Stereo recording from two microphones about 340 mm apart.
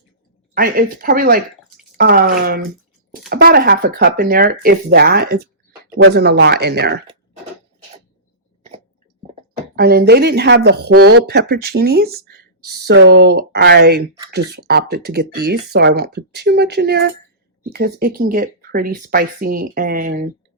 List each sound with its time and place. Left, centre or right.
0.5 s speech: right
9.7 s speech: right
11.0 s speech: right
11.3 s speech: right